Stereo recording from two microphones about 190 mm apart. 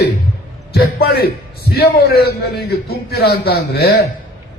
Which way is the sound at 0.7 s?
55° left (ahead or behind).